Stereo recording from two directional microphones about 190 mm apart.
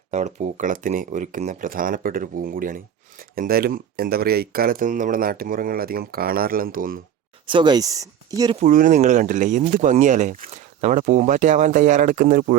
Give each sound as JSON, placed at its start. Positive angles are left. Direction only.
{"t": 0.1, "sound": "speech", "side_deg": -35}
{"t": 7.4, "sound": "speech", "side_deg": -25}
{"t": 8.5, "sound": "speech", "side_deg": -45}